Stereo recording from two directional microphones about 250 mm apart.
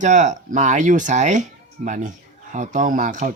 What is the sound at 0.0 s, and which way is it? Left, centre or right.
Speech, right.